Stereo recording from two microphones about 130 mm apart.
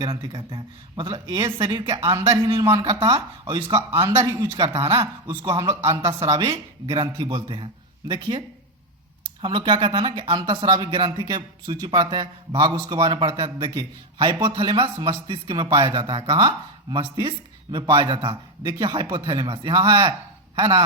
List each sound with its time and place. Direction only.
0.0 s a man's voice: 35° right (ahead or behind)
2.6 s a man's voice: 30° right (ahead or behind)
4.1 s a man's voice: 25° right (ahead or behind)
5.9 s a man's voice: 25° right (ahead or behind)